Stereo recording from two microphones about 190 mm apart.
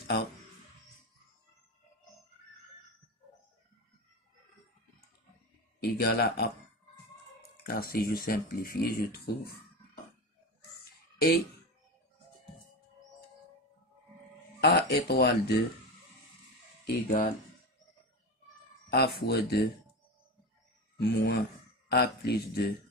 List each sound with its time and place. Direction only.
0.0 s speech: 60° left (ahead or behind)
5.8 s speech: 55° left (ahead or behind)
7.6 s speech: 50° left (ahead or behind)
14.6 s speech: 60° left (ahead or behind)
16.8 s speech: 50° left (ahead or behind)
18.9 s speech: 55° left (ahead or behind)
21.0 s speech: 55° left (ahead or behind)